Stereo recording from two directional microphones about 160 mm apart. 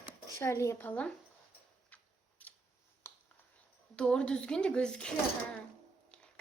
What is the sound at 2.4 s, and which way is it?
Scissors, 10° left (ahead or behind).